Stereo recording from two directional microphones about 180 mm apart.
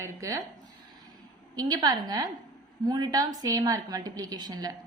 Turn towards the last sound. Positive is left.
turn(degrees=-20)  # may be behind; listen again after turning